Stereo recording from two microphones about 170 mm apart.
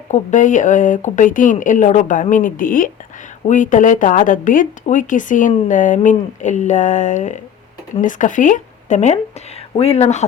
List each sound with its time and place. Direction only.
0.1 s speech: 45° left (ahead or behind)